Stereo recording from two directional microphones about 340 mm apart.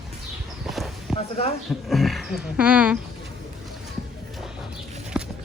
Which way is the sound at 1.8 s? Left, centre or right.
Centre.